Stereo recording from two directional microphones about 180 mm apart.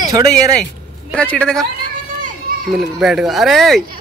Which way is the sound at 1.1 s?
5° left (ahead or behind).